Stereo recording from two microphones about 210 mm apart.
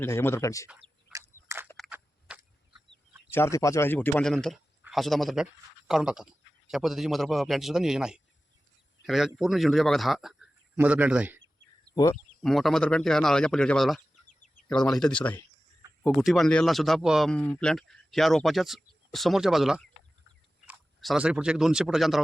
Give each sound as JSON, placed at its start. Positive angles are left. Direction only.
{"t": 0.0, "sound": "speech", "side_deg": 10}
{"t": 0.7, "sound": "a sound", "side_deg": -10}
{"t": 1.6, "sound": "a sound", "side_deg": 0}
{"t": 3.2, "sound": "a man's voice", "side_deg": 10}
{"t": 14.3, "sound": "bird", "side_deg": 35}
{"t": 14.7, "sound": "a man's voice", "side_deg": 5}